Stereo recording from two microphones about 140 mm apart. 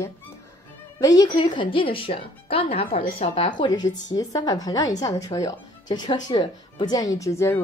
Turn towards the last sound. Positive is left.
turn(degrees=20)  # may be behind; listen again after turning